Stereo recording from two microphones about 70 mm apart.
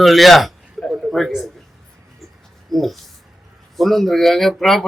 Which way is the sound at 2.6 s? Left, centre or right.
Centre.